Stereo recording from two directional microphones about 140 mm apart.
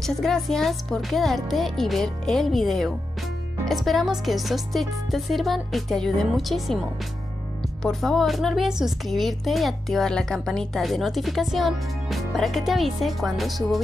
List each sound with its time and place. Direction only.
0.0 s speech: centre (ahead or behind)
7.8 s speech: centre (ahead or behind)